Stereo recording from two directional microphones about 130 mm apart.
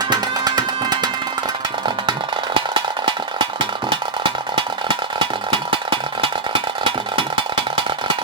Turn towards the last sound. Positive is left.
turn(degrees=-40)  # may be behind; listen again after turning